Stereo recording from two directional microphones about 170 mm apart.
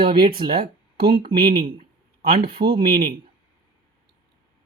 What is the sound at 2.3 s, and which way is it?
Speech, 65° right (ahead or behind).